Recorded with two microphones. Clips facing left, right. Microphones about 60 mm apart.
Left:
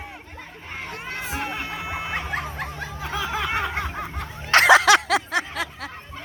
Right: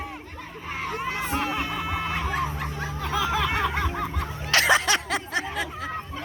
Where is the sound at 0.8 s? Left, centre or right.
Centre.